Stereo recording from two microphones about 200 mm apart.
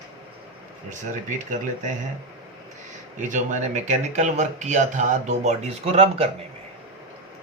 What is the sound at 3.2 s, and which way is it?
A man's voice, 40° right (ahead or behind).